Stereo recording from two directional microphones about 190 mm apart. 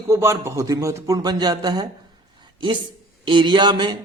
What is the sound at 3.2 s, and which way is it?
Speech, 25° right (ahead or behind).